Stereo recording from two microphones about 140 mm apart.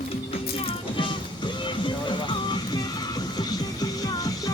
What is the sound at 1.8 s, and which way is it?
Music, 35° left (ahead or behind).